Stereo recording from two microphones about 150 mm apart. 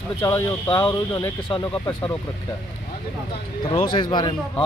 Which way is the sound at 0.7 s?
10° left (ahead or behind).